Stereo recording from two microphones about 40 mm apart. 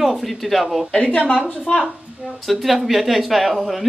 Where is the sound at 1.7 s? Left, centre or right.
Centre.